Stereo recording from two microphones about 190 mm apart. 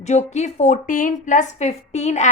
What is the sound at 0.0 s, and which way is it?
A woman's voice, 35° left (ahead or behind).